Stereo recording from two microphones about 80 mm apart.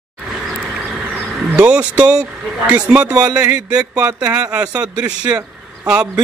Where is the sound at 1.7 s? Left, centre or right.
Centre.